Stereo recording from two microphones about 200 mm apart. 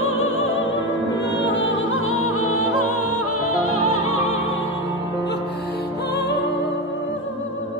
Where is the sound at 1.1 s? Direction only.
65° left (ahead or behind); by 2.4 s 90° left.